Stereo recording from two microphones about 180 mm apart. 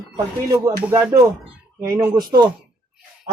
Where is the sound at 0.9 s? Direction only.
10° right (ahead or behind).